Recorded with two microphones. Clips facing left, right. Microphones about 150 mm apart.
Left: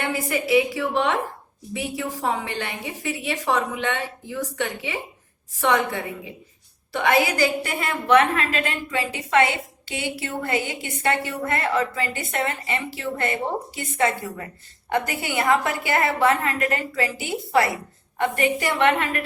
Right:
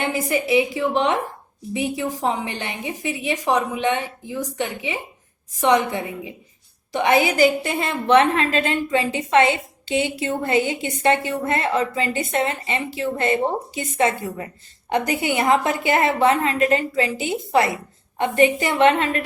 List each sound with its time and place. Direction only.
0.0 s a woman's voice: 20° right (ahead or behind)